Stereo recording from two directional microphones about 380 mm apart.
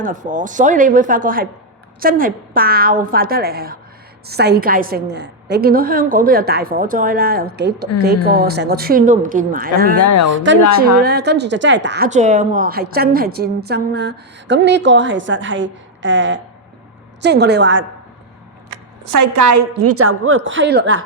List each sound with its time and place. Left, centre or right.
0.0 s a woman's voice: centre
10.0 s speech: left
10.3 s a woman's voice: right
18.7 s a woman's voice: right